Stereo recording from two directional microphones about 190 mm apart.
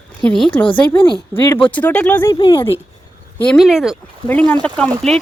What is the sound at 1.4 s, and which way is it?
Speech, 25° left (ahead or behind).